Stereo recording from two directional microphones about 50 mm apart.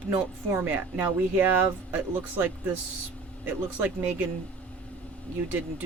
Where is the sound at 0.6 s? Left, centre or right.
Right.